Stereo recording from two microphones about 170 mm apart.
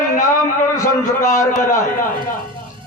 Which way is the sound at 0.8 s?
20° left (ahead or behind).